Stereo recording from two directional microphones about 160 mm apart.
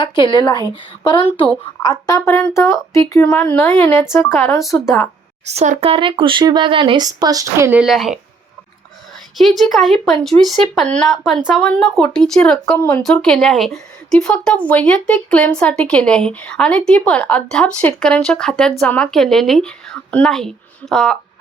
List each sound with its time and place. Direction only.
0.0 s speech: 30° left (ahead or behind)
5.5 s speech: 45° right (ahead or behind); by 7.7 s 25° right (ahead or behind)
7.7 s speech: 5° right (ahead or behind)
9.4 s speech: centre (ahead or behind)